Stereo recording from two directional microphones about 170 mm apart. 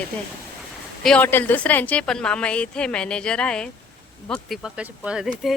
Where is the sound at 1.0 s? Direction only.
10° left (ahead or behind).